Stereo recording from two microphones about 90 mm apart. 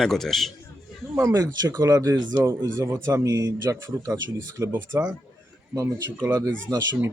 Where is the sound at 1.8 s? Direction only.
40° right (ahead or behind).